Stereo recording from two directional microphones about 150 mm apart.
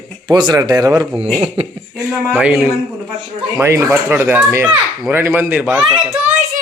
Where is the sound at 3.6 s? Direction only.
20° right (ahead or behind).